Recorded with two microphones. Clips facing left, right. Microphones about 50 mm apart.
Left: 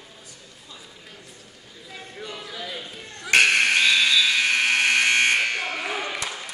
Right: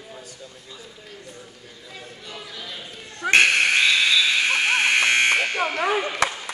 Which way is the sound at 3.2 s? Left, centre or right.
Right.